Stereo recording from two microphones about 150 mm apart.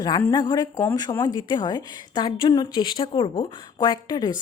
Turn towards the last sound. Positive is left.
turn(degrees=30)  # may be behind; listen again after turning